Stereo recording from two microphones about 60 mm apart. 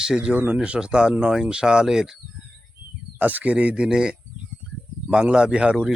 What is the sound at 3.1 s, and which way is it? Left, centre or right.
Speech, right.